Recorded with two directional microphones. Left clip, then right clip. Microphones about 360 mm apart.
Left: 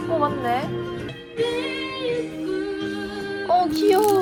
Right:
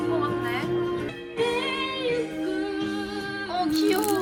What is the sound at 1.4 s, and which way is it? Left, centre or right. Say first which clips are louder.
Music: left 1 dB; centre.